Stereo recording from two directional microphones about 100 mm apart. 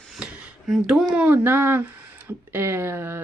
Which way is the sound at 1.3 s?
20° right (ahead or behind).